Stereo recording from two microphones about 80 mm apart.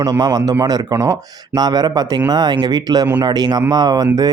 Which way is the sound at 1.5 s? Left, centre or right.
Right.